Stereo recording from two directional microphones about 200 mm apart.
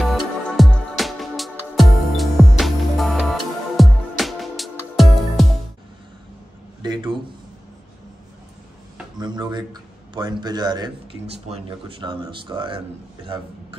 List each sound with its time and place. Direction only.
0.0 s music: centre (ahead or behind)
6.8 s a sound: 20° right (ahead or behind)
9.2 s a man's voice: 20° right (ahead or behind)
11.3 s a man's voice: 30° right (ahead or behind)